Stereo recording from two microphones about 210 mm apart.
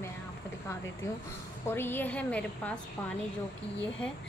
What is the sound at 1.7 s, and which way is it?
A woman's voice, 10° left (ahead or behind).